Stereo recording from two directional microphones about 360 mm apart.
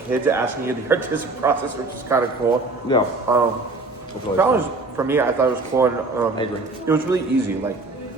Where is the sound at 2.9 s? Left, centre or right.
Centre.